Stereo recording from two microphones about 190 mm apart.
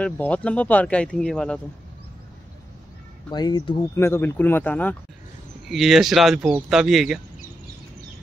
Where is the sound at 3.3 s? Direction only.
25° left (ahead or behind).